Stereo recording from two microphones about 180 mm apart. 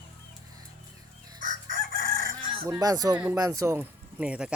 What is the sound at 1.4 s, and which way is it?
Chicken, 45° right (ahead or behind).